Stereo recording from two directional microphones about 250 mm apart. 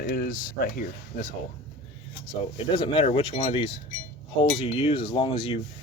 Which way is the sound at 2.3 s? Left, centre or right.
Centre.